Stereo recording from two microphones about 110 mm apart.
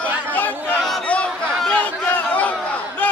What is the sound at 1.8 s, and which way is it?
Battle cry, 15° left (ahead or behind).